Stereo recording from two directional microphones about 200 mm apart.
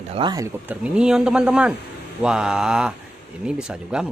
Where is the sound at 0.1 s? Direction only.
20° right (ahead or behind).